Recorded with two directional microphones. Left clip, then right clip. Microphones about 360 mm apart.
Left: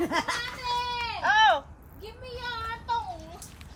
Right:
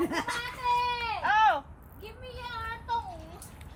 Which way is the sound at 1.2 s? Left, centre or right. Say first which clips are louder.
Left 3 dB; left.